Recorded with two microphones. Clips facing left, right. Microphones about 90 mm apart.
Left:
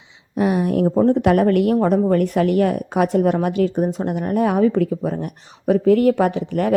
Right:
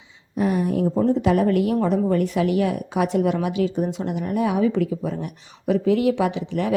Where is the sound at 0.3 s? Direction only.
75° left (ahead or behind).